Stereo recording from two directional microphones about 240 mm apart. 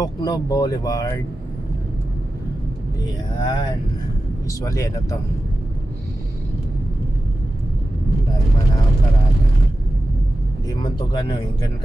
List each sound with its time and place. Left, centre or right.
0.0 s speech: centre
3.4 s speech: centre
10.7 s speech: centre